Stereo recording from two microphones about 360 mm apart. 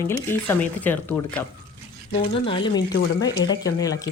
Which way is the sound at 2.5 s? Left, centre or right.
Centre.